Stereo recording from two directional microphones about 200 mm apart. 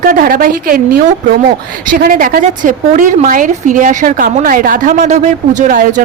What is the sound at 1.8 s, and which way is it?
Speech, 45° right (ahead or behind).